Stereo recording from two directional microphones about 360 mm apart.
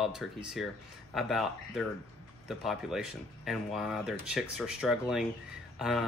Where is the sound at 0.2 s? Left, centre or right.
Centre.